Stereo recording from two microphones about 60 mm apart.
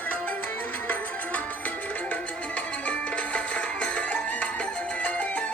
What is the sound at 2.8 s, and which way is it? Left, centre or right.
Music, left.